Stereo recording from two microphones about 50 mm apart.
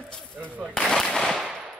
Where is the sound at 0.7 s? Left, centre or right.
Centre.